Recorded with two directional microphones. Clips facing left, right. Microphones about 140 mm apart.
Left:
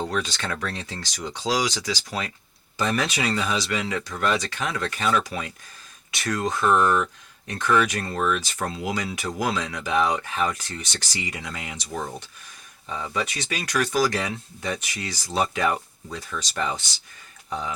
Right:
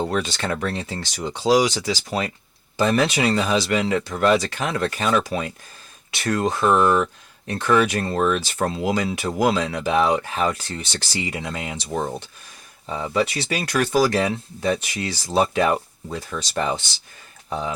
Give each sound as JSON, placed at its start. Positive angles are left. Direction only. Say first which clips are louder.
{"t": 0.1, "sound": "speech", "louder": "right 4 dB", "side_deg": -30}